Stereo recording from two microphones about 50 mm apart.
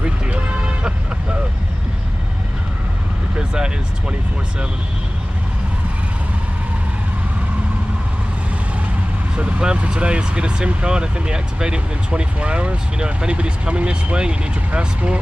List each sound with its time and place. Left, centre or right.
3.3 s vehicle: centre
9.3 s speech: right